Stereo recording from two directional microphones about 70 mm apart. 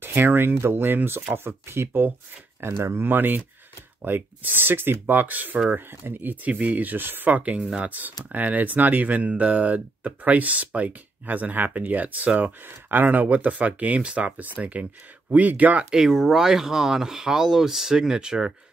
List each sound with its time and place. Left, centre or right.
0.0 s speech: right
15.9 s speech: centre